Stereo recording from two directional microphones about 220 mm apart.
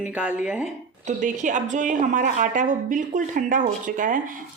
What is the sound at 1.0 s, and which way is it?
A woman's voice, 35° right (ahead or behind).